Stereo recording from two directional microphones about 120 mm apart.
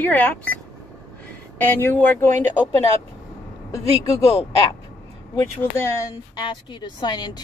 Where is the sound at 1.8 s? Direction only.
20° left (ahead or behind).